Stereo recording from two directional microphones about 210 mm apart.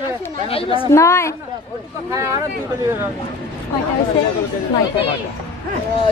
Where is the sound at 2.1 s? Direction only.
15° right (ahead or behind).